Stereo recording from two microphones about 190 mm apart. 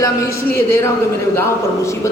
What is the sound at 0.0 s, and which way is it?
A man's voice, 15° left (ahead or behind).